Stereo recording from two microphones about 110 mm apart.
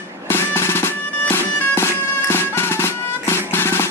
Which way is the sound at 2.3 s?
20° left (ahead or behind).